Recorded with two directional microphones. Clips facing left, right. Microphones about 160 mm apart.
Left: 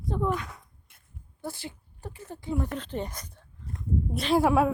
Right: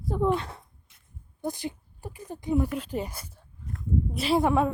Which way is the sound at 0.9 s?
55° left (ahead or behind).